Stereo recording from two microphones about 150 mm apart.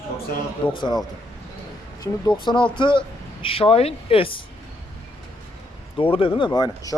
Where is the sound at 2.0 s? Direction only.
30° left (ahead or behind).